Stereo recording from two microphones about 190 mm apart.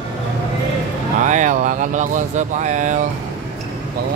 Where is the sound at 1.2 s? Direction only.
40° right (ahead or behind).